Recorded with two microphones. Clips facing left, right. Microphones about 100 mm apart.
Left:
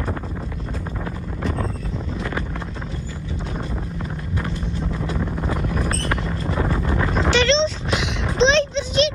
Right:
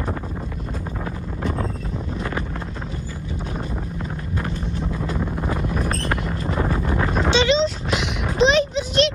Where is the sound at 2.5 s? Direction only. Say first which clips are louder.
Even; 5° right (ahead or behind).